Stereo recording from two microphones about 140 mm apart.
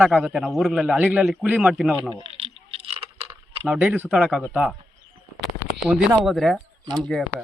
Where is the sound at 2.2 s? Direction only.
45° right (ahead or behind).